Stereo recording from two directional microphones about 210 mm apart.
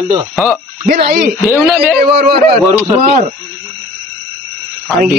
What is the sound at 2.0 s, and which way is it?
Speech, 45° right (ahead or behind).